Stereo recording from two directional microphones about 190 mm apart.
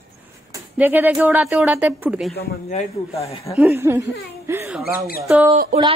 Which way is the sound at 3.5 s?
15° right (ahead or behind).